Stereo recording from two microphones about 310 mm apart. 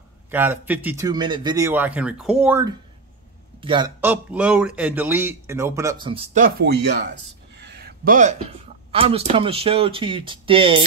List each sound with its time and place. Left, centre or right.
0.3 s speech: centre